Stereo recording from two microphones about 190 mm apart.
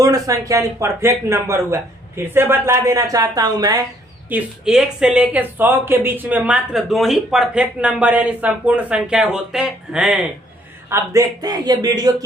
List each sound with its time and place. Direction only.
0.0 s speech: 20° right (ahead or behind)
4.3 s speech: 5° right (ahead or behind)
10.8 s a man's voice: 15° right (ahead or behind)